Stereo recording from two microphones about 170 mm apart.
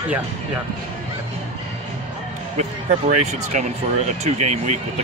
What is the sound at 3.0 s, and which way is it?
Speech, 45° right (ahead or behind).